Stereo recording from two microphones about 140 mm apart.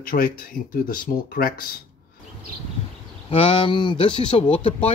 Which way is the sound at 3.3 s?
40° left (ahead or behind).